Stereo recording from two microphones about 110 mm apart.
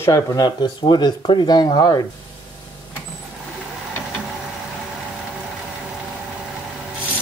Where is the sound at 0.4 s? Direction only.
40° left (ahead or behind).